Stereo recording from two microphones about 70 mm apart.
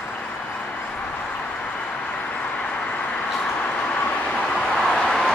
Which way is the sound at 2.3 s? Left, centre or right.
Centre.